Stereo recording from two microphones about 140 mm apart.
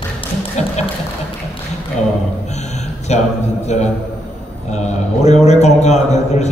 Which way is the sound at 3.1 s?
55° left (ahead or behind).